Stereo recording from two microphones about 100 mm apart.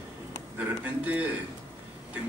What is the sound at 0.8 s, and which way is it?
Speech, 15° right (ahead or behind).